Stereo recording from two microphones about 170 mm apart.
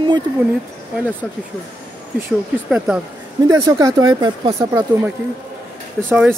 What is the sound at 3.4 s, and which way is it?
Speech, 20° right (ahead or behind).